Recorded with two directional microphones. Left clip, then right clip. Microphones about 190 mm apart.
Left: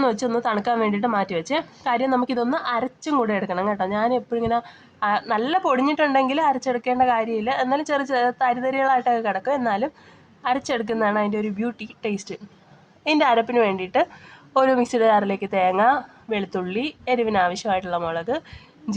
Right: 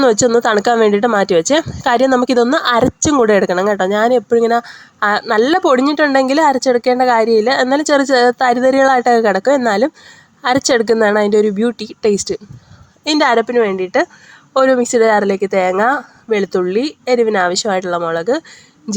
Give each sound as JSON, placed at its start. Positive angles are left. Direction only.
{"t": 0.1, "sound": "a woman's voice", "side_deg": -40}
{"t": 13.5, "sound": "a woman's voice", "side_deg": -20}